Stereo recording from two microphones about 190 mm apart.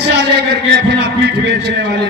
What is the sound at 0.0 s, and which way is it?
A man's voice, 60° right (ahead or behind).